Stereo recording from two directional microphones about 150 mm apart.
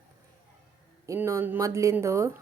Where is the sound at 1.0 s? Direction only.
20° right (ahead or behind).